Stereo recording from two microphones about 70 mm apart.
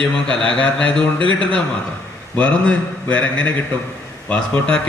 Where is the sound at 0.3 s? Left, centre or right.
Centre.